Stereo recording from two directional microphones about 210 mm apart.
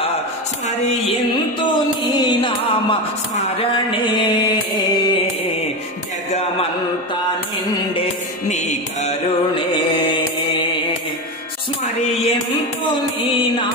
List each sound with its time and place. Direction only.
0.7 s music: 25° left (ahead or behind)
6.3 s mantra: 30° left (ahead or behind)
8.5 s music: 35° left (ahead or behind)
11.8 s music: 30° left (ahead or behind)